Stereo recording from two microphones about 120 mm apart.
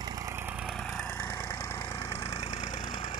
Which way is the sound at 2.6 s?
40° left (ahead or behind).